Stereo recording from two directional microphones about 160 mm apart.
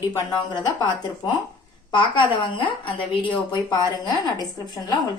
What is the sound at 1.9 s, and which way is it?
Speech, 30° left (ahead or behind).